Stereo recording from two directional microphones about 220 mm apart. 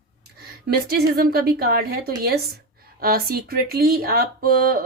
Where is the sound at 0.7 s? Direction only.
45° right (ahead or behind).